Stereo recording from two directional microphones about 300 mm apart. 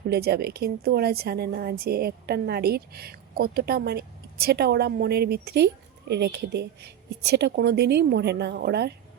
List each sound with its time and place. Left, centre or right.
0.1 s a woman's voice: right